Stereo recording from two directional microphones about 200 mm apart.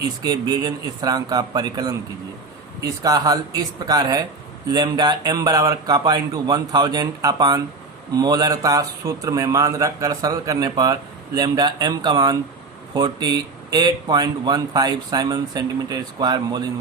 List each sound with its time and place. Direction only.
0.2 s a man's voice: 20° right (ahead or behind)